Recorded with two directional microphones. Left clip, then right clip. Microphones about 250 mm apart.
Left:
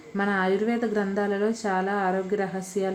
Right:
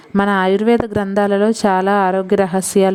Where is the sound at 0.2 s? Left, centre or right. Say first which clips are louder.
Right 9 dB; right.